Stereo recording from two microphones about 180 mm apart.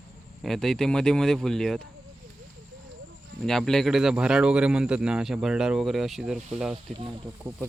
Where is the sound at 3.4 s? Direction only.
Centre (ahead or behind).